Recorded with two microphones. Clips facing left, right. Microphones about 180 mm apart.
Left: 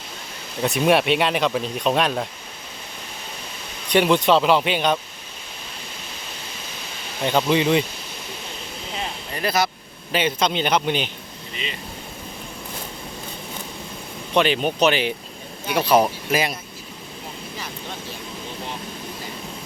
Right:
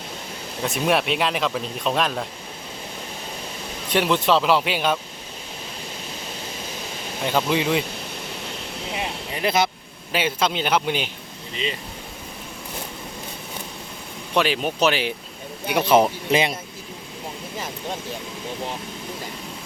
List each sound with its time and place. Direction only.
0.6 s speech: centre (ahead or behind)
3.8 s speech: centre (ahead or behind)
7.3 s speech: 5° right (ahead or behind)
9.0 s vehicle: 15° right (ahead or behind)
10.1 s a man's voice: 5° right (ahead or behind)
14.3 s speech: 5° right (ahead or behind)
15.6 s speech: 15° right (ahead or behind)